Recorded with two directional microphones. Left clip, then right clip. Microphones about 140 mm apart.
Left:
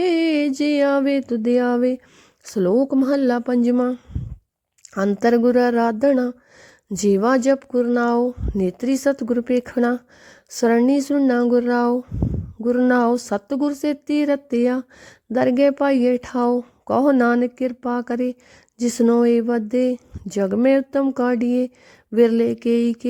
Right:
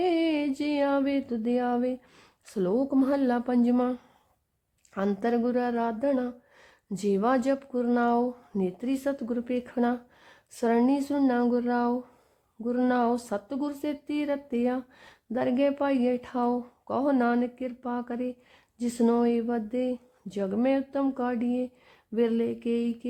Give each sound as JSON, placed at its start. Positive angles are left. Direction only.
{"t": 0.0, "sound": "a sound", "side_deg": 45}
{"t": 0.6, "sound": "speech", "side_deg": 45}
{"t": 2.7, "sound": "speech", "side_deg": 15}
{"t": 3.0, "sound": "speech", "side_deg": 40}
{"t": 3.8, "sound": "speech", "side_deg": 25}
{"t": 5.2, "sound": "speech", "side_deg": 55}